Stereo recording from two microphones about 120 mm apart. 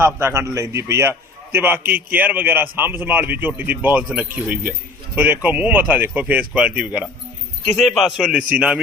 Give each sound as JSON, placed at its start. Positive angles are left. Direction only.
{"t": 0.0, "sound": "a man's voice", "side_deg": -20}